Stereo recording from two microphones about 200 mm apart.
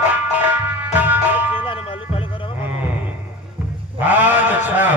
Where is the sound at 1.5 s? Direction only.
25° left (ahead or behind).